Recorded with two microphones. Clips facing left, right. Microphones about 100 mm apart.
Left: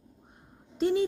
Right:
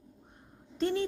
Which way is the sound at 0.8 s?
15° left (ahead or behind).